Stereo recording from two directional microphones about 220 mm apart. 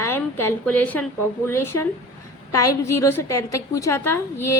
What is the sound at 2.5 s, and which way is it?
Speech, 90° left.